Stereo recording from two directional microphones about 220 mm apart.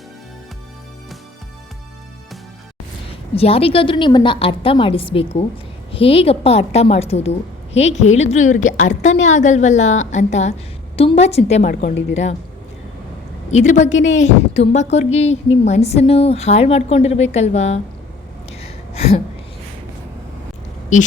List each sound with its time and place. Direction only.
3.3 s a woman's voice: 25° left (ahead or behind)
13.5 s a woman's voice: 30° left (ahead or behind)